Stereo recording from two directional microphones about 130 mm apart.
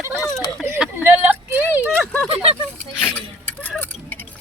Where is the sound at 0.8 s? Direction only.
15° right (ahead or behind).